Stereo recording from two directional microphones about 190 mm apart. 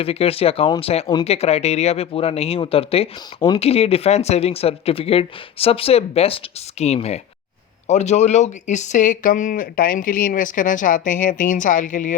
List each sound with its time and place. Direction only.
0.0 s speech: 30° left (ahead or behind)